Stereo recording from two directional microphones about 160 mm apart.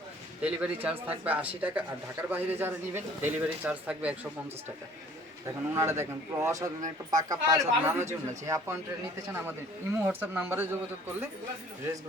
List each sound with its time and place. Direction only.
0.4 s speech: 10° right (ahead or behind)
5.7 s speech: 15° right (ahead or behind)